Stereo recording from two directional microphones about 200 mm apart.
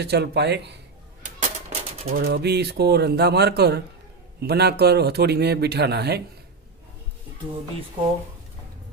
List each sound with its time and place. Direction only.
0.0 s a man's voice: 55° right (ahead or behind)
1.2 s a sound: 35° right (ahead or behind)
2.1 s a man's voice: 50° right (ahead or behind)